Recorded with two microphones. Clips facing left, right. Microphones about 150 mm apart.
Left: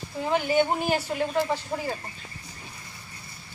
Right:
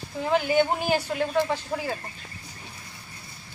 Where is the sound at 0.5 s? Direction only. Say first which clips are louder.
Left 1 dB; centre (ahead or behind).